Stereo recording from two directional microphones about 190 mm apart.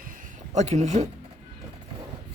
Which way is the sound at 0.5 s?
35° right (ahead or behind).